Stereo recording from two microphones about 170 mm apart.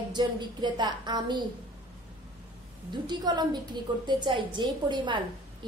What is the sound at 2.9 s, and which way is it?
A woman's voice, 25° right (ahead or behind).